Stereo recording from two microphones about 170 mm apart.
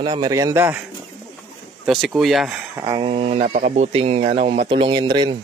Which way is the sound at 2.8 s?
25° right (ahead or behind).